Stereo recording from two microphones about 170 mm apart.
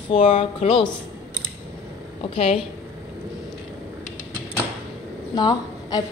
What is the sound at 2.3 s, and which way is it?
Speech, 35° left (ahead or behind).